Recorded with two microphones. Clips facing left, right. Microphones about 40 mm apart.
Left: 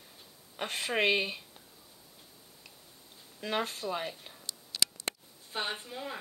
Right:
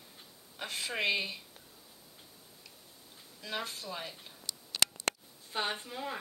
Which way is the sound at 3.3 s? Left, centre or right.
Left.